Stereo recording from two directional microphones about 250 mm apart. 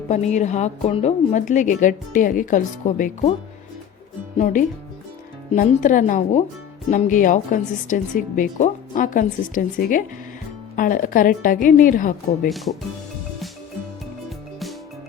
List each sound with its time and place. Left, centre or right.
0.1 s a woman's voice: left
4.4 s a woman's voice: left
12.5 s speech: centre